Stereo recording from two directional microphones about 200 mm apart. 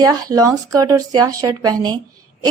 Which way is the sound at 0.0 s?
15° right (ahead or behind).